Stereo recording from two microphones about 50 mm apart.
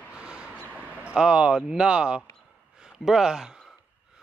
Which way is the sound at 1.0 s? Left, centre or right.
Right.